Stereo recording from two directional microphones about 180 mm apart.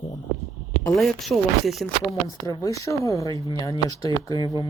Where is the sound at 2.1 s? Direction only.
20° left (ahead or behind).